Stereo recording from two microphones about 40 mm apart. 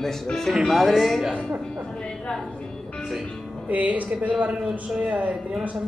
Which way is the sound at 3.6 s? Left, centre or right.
Right.